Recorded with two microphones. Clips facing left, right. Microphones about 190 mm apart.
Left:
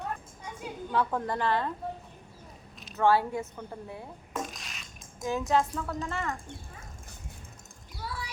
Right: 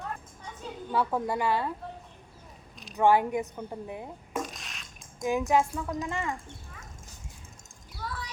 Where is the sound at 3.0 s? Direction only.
15° right (ahead or behind).